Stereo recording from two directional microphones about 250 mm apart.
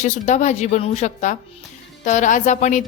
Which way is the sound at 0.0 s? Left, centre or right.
Left.